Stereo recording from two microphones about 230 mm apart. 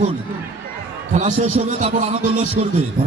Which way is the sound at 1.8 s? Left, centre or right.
Right.